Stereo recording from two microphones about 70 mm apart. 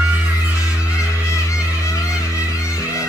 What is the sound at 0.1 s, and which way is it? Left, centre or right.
Music, right.